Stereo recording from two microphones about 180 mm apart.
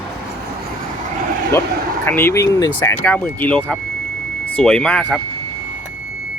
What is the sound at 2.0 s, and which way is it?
Speech, 15° left (ahead or behind).